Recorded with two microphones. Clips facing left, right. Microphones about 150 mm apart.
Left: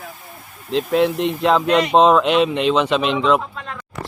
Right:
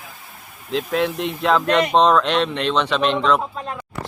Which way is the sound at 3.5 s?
35° right (ahead or behind).